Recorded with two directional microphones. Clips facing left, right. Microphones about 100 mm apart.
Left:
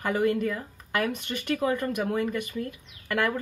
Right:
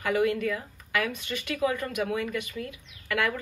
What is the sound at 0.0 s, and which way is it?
Speech, 40° left (ahead or behind).